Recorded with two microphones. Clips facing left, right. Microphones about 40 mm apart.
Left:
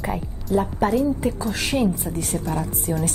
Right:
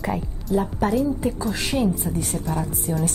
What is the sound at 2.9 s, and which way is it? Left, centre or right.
Speech, left.